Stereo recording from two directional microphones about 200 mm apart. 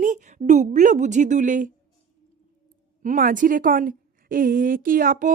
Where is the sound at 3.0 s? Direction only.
40° right (ahead or behind).